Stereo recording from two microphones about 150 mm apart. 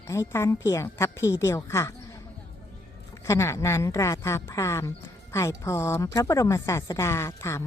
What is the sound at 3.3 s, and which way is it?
A woman's voice, 20° left (ahead or behind).